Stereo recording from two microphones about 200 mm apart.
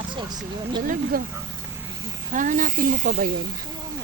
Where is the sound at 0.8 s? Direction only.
45° right (ahead or behind).